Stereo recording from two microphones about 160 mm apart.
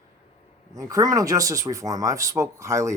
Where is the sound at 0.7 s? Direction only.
20° right (ahead or behind).